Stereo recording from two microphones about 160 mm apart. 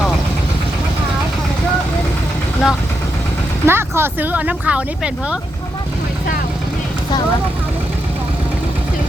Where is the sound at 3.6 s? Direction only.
15° right (ahead or behind).